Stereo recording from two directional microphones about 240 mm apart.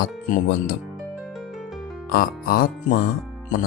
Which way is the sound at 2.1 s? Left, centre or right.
Left.